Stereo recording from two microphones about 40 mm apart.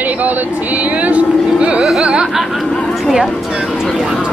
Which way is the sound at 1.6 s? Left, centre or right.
Right.